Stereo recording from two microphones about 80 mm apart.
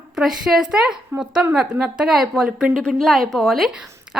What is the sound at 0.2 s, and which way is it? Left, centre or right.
A woman's voice, centre.